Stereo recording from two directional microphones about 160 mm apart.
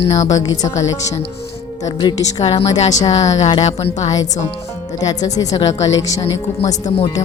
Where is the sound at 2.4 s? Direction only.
40° left (ahead or behind).